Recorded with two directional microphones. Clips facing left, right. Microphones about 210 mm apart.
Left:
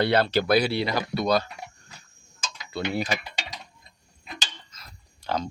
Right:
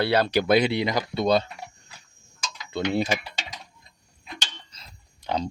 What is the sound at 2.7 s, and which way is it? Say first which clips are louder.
Speech: right 3 dB; 25° right (ahead or behind).